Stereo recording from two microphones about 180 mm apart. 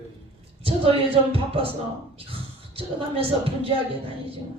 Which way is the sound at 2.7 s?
30° right (ahead or behind).